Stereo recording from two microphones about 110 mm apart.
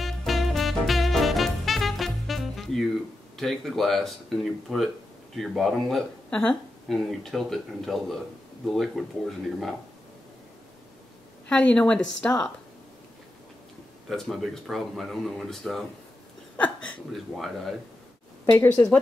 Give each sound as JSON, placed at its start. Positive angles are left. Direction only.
{"t": 0.0, "sound": "music", "side_deg": 0}
{"t": 3.3, "sound": "speech", "side_deg": 0}
{"t": 11.4, "sound": "a woman's voice", "side_deg": 10}
{"t": 14.0, "sound": "speech", "side_deg": 5}
{"t": 16.5, "sound": "speech", "side_deg": 15}
{"t": 17.1, "sound": "speech", "side_deg": 0}
{"t": 18.4, "sound": "a woman's voice", "side_deg": 25}
{"t": 18.7, "sound": "a woman's voice", "side_deg": 15}